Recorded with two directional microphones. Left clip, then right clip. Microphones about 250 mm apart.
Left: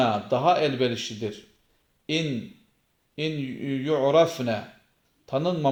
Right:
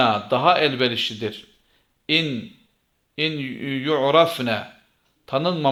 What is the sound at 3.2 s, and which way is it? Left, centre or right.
A man's voice, centre.